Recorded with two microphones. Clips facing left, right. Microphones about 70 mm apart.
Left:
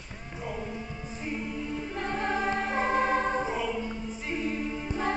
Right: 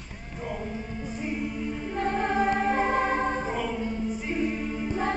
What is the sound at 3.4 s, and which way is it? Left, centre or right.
Choir, right.